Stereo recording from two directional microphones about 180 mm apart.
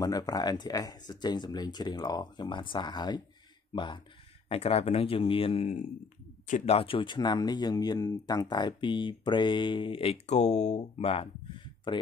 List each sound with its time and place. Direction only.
0.0 s speech: 20° left (ahead or behind)